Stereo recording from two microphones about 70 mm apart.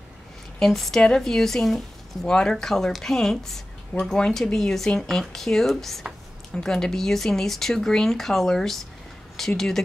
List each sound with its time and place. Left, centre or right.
0.6 s speech: centre